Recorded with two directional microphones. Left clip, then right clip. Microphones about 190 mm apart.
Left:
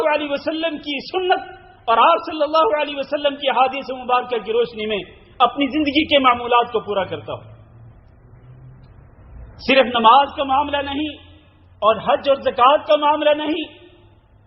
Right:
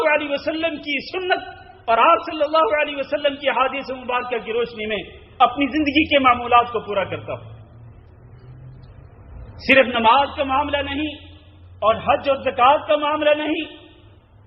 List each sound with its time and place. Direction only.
0.0 s a man's voice: 35° left (ahead or behind)
9.6 s a man's voice: 35° left (ahead or behind)